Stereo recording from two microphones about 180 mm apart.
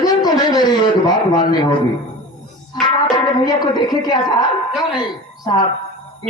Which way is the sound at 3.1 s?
25° left (ahead or behind).